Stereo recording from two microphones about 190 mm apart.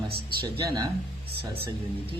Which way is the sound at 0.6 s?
20° right (ahead or behind).